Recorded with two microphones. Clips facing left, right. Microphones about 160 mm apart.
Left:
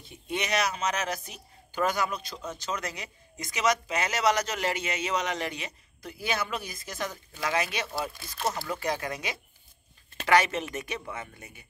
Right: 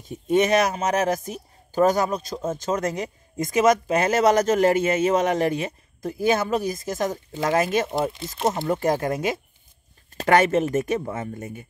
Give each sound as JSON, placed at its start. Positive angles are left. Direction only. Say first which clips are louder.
{"t": 0.0, "sound": "speech", "louder": "right 13 dB", "side_deg": -45}
{"t": 8.1, "sound": "speech", "louder": "right 7 dB", "side_deg": -20}
{"t": 8.6, "sound": "speech", "louder": "right 9 dB", "side_deg": -45}